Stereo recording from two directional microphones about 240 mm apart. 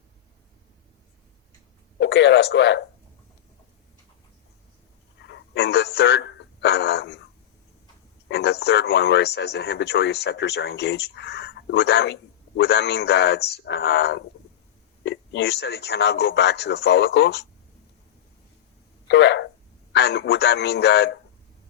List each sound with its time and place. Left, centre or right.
2.0 s speech: left
5.3 s speech: left
8.3 s speech: left
19.0 s speech: left